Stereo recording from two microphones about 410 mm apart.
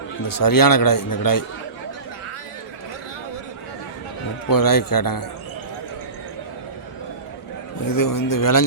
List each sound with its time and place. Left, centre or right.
0.3 s a man's voice: left
4.4 s a man's voice: left
7.9 s a man's voice: left